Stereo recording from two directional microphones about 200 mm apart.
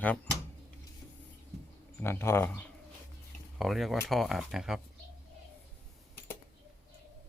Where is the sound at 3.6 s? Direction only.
Centre (ahead or behind).